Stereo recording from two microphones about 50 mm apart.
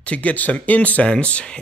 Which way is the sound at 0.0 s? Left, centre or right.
Left.